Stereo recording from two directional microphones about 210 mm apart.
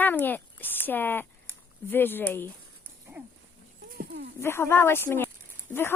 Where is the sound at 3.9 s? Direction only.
50° right (ahead or behind).